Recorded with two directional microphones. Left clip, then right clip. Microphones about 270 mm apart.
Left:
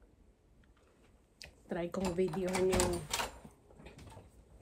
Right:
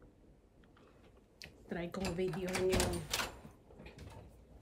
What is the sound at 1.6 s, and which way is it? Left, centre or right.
Speech, centre.